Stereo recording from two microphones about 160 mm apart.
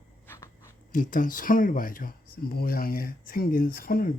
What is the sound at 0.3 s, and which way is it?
Dog, 15° left (ahead or behind).